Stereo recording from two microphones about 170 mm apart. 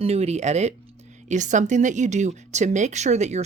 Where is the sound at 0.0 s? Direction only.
40° right (ahead or behind).